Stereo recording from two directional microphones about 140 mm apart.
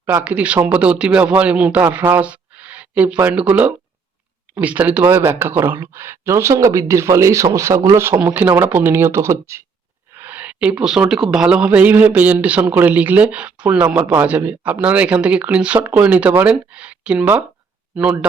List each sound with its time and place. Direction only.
0.0 s a woman's voice: 15° right (ahead or behind)